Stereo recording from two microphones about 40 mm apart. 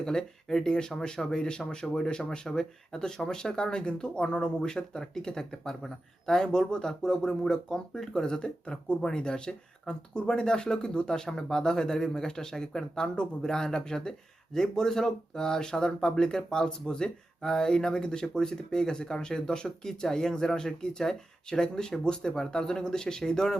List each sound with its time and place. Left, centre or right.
0.0 s speech: centre